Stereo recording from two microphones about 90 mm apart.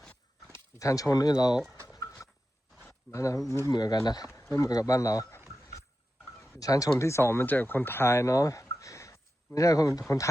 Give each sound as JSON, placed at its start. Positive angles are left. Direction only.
{"t": 0.5, "sound": "speech", "side_deg": 35}
{"t": 2.2, "sound": "a sound", "side_deg": 35}
{"t": 3.1, "sound": "speech", "side_deg": 35}
{"t": 3.7, "sound": "speech", "side_deg": 45}
{"t": 4.3, "sound": "speech", "side_deg": 30}
{"t": 6.6, "sound": "speech", "side_deg": 40}
{"t": 8.6, "sound": "a sound", "side_deg": 35}
{"t": 9.6, "sound": "speech", "side_deg": 40}